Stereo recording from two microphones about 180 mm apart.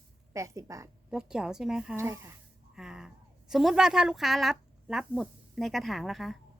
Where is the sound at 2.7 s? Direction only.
5° right (ahead or behind).